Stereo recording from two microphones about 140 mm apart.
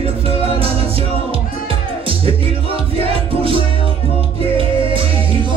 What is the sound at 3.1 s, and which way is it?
Music, 40° right (ahead or behind).